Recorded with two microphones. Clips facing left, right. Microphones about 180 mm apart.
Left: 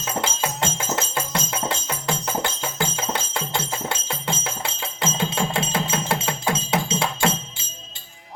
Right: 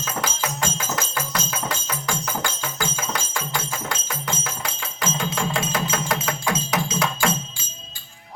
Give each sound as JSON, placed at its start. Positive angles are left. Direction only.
{"t": 0.0, "sound": "music", "side_deg": 25}